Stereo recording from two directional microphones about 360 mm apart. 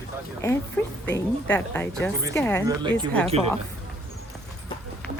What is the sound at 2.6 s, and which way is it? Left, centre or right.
Speech, centre.